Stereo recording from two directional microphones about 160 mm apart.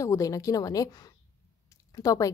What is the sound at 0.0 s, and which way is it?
Speech, 20° left (ahead or behind).